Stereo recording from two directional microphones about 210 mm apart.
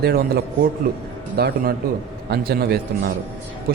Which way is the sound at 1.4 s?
50° right (ahead or behind).